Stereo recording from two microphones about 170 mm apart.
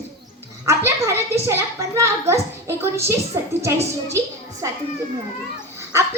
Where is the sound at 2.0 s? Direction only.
15° right (ahead or behind).